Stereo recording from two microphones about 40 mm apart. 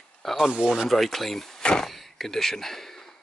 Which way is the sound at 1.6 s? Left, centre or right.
Left.